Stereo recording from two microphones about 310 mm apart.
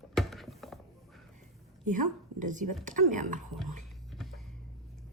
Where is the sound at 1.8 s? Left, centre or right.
Right.